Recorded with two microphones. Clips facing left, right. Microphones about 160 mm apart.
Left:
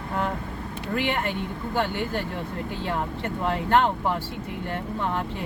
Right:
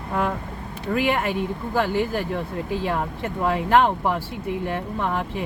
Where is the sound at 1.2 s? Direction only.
90° right.